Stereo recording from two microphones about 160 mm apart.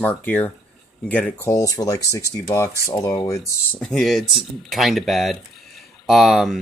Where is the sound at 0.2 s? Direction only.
10° left (ahead or behind).